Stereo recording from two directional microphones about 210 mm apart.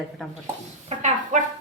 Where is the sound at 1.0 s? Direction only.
35° right (ahead or behind).